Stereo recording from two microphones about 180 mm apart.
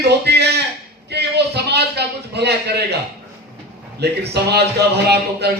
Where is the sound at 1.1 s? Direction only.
65° right (ahead or behind).